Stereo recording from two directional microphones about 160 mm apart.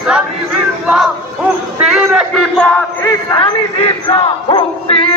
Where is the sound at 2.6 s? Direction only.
10° left (ahead or behind).